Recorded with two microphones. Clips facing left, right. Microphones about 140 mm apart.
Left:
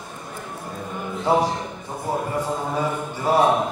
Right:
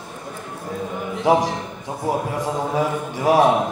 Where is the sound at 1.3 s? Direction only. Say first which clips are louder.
Right 3 dB; 90° right.